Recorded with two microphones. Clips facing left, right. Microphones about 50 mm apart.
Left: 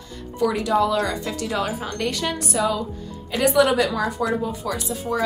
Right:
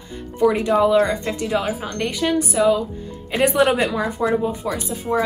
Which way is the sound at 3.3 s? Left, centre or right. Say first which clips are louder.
Right 1 dB; right.